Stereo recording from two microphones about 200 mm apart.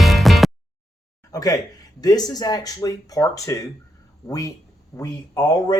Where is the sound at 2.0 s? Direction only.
20° left (ahead or behind).